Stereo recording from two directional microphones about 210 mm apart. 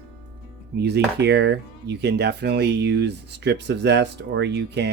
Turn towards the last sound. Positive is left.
turn(degrees=-55)  # may be behind; listen again after turning